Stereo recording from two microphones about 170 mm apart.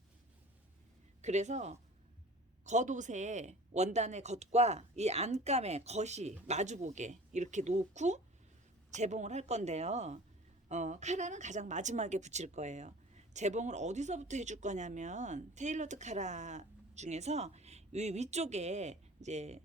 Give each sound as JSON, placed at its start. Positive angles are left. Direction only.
{"t": 1.2, "sound": "a woman's voice", "side_deg": -45}